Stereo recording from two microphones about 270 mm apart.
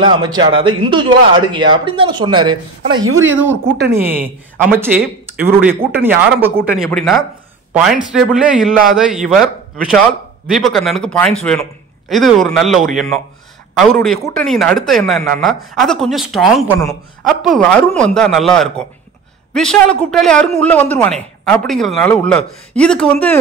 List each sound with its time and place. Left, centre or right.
0.0 s a man's voice: centre
2.9 s speech: right
3.9 s a man's voice: centre
10.4 s a man's voice: centre